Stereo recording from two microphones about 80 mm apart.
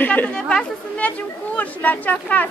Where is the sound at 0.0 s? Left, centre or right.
Left.